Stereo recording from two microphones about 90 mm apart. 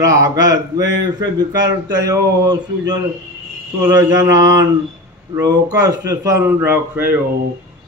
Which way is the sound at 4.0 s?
45° right (ahead or behind).